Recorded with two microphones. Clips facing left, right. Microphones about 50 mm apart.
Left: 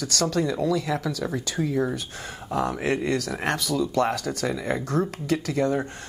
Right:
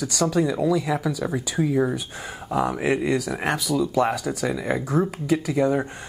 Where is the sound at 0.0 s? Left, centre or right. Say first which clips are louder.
Right 3 dB; centre.